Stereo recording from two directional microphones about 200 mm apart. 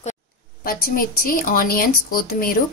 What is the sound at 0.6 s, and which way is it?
A woman's voice, 45° left (ahead or behind).